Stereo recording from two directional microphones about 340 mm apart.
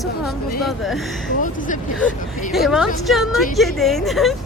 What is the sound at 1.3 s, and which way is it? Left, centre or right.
Speech, left.